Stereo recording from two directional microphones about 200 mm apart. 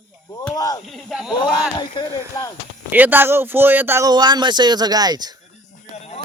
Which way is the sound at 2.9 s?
10° right (ahead or behind).